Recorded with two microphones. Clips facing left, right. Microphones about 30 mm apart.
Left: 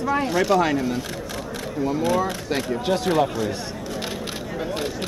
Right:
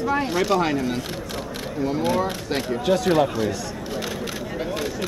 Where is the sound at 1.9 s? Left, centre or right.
Right.